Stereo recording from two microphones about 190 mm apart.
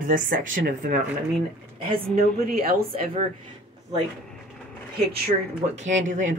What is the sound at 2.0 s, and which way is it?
Speech, 50° right (ahead or behind).